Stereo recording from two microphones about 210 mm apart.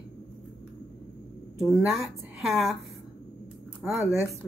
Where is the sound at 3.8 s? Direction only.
5° right (ahead or behind).